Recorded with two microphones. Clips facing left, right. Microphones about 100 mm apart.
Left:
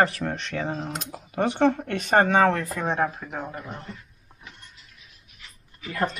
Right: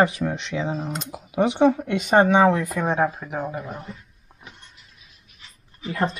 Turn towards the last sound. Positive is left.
turn(degrees=-25)  # may be behind; listen again after turning